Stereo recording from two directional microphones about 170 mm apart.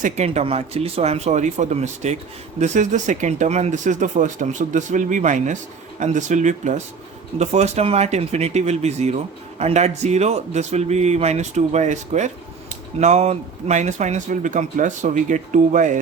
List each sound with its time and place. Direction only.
0.0 s speech: 40° right (ahead or behind)